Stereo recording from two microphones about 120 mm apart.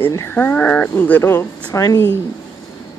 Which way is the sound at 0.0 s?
20° left (ahead or behind).